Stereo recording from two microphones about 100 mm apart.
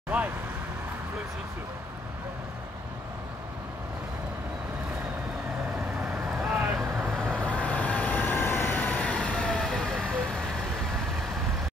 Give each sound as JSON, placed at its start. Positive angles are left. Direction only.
{"t": 6.0, "sound": "vehicle", "side_deg": -5}
{"t": 6.8, "sound": "vehicle", "side_deg": -20}
{"t": 7.4, "sound": "vehicle", "side_deg": 15}